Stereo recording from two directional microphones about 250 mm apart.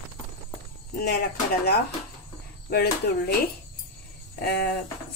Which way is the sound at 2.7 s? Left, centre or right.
Left.